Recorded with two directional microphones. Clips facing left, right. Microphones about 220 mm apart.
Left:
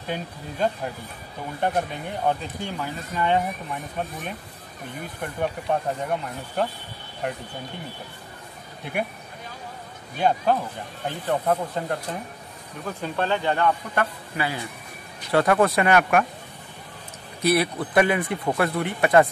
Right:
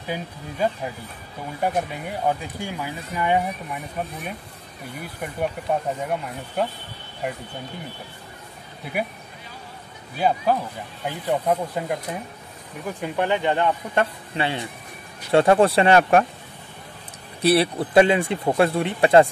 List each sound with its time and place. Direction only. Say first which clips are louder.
0.0 s speech: right 1 dB; 5° right (ahead or behind)
5.0 s speech: right 1 dB; 10° right (ahead or behind)
10.1 s speech: even; 5° right (ahead or behind); by 16.3 s 30° right (ahead or behind)
17.4 s speech: right 3 dB; 30° right (ahead or behind)